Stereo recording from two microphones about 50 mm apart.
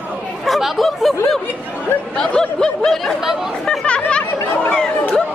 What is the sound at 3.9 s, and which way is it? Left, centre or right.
Chatter, left.